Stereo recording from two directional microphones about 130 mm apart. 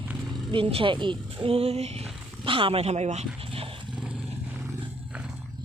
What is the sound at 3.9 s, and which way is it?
Vehicle, 5° right (ahead or behind).